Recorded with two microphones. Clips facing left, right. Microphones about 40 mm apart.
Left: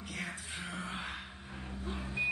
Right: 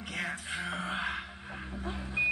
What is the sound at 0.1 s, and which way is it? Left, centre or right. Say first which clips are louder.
Music: right 6 dB; right.